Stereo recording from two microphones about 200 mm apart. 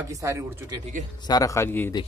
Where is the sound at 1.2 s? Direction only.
20° left (ahead or behind).